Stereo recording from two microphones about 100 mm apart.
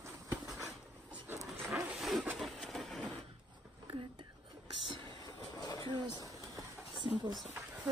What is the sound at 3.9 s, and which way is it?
Whispering, 60° right (ahead or behind).